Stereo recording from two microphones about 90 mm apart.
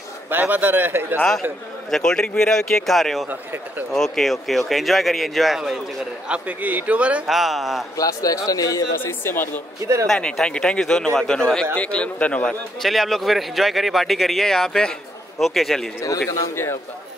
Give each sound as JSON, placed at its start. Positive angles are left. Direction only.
{"t": 0.3, "sound": "a man's voice", "side_deg": -20}
{"t": 1.9, "sound": "speech", "side_deg": 5}
{"t": 6.2, "sound": "a man's voice", "side_deg": -15}
{"t": 7.2, "sound": "speech", "side_deg": -5}
{"t": 8.0, "sound": "speech", "side_deg": 40}
{"t": 9.0, "sound": "speech", "side_deg": 25}
{"t": 10.0, "sound": "a man's voice", "side_deg": 5}
{"t": 12.8, "sound": "speech", "side_deg": 0}